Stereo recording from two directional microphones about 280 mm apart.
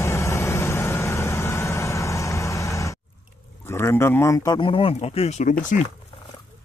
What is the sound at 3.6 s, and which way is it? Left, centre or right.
Speech, centre.